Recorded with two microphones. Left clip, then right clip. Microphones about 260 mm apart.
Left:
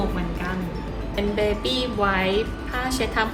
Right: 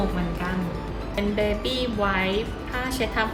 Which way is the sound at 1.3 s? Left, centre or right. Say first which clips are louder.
Left 2 dB; left.